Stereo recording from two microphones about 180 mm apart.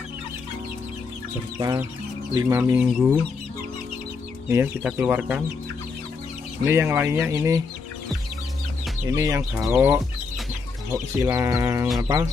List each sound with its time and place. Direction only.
1.6 s music: 20° right (ahead or behind)
2.3 s speech: 15° right (ahead or behind)
4.5 s speech: 10° right (ahead or behind)
6.6 s speech: 15° right (ahead or behind)
9.1 s speech: 15° right (ahead or behind)
9.5 s speech: 5° right (ahead or behind)
12.0 s music: 20° right (ahead or behind)